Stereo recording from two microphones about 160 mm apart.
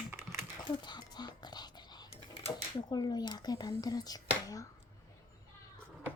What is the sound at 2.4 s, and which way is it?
Speech, 30° left (ahead or behind).